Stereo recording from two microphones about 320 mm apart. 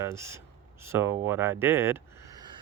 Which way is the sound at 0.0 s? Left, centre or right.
Centre.